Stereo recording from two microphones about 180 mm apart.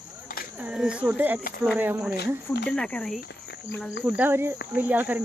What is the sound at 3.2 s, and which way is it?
Cricket, 75° left (ahead or behind).